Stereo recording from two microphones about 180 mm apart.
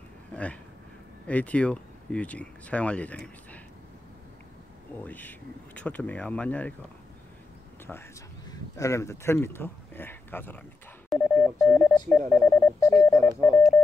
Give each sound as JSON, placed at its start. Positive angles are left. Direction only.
{"t": 0.3, "sound": "speech", "side_deg": 5}
{"t": 5.0, "sound": "speech", "side_deg": 10}
{"t": 8.5, "sound": "speech", "side_deg": 15}
{"t": 11.1, "sound": "telephone dialing", "side_deg": 15}